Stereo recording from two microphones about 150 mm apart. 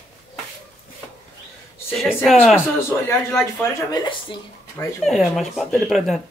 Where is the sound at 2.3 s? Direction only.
Centre (ahead or behind).